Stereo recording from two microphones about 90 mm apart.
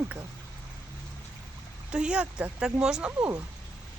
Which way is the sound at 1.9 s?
10° right (ahead or behind).